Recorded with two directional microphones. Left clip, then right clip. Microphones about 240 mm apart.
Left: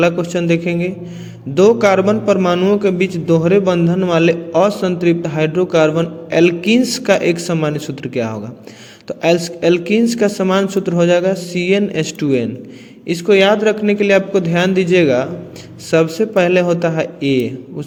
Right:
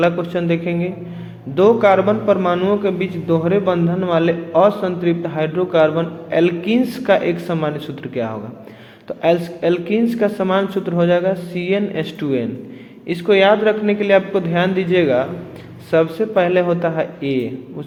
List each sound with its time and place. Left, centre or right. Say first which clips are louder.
0.0 s a man's voice: left 2 dB; left